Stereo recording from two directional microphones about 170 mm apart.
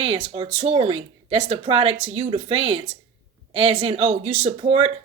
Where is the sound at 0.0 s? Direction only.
35° right (ahead or behind).